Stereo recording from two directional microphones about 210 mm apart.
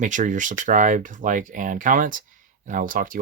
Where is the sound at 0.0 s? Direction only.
35° right (ahead or behind).